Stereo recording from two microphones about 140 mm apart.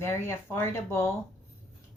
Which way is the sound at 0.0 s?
20° left (ahead or behind).